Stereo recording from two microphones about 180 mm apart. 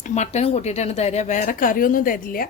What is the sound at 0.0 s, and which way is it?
Speech, 40° left (ahead or behind).